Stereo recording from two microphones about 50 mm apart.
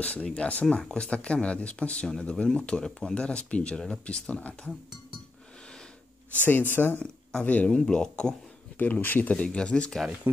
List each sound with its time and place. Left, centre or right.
0.0 s speech: left; by 3.2 s centre
3.2 s speech: left
6.4 s speech: left
7.4 s speech: left
7.7 s speech: centre
8.7 s speech: left
9.4 s speech: centre
10.3 s speech: right